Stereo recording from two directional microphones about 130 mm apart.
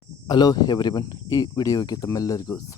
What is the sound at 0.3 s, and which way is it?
Speech, 35° left (ahead or behind).